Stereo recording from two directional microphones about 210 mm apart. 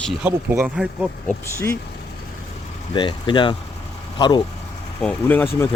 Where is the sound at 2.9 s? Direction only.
20° left (ahead or behind).